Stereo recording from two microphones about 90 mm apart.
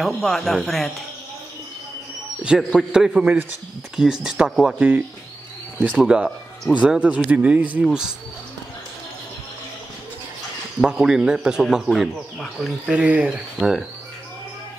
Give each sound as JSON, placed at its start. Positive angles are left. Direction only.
{"t": 0.0, "sound": "speech", "side_deg": 5}
{"t": 2.4, "sound": "speech", "side_deg": -10}
{"t": 4.7, "sound": "speech", "side_deg": -20}
{"t": 10.8, "sound": "speech", "side_deg": -5}
{"t": 12.9, "sound": "speech", "side_deg": -15}